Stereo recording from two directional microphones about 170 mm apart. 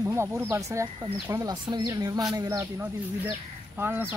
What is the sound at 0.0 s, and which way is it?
Speech, 15° right (ahead or behind).